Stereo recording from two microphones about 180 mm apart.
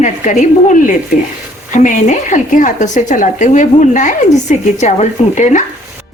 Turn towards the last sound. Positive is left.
turn(degrees=45)  # may be behind; listen again after turning